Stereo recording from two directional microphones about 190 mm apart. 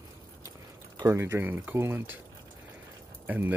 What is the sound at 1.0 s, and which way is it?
Speech, 15° right (ahead or behind).